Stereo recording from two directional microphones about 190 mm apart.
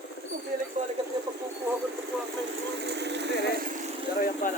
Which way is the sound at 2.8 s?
65° right (ahead or behind).